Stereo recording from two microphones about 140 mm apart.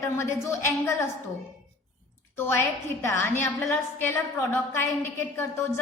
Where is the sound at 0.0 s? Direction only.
20° left (ahead or behind).